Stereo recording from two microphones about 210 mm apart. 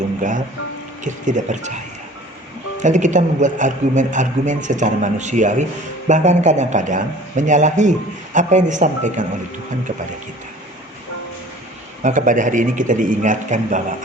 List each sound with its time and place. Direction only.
0.2 s a man's voice: 35° right (ahead or behind)
2.8 s a man's voice: 35° right (ahead or behind)
12.0 s a man's voice: 40° right (ahead or behind)